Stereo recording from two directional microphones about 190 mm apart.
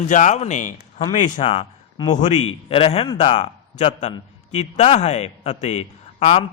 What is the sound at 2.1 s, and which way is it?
A man's voice, 40° left (ahead or behind).